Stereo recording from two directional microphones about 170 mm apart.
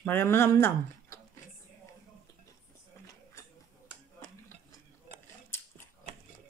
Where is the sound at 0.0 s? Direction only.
15° left (ahead or behind).